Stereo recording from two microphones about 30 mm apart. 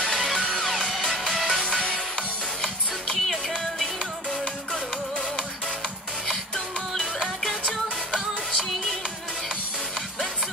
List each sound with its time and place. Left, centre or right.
1.3 s music: centre
1.6 s music: left
3.2 s music: centre
6.2 s music: centre